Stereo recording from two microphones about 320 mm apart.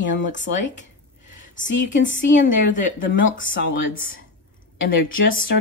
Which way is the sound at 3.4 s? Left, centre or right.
Left.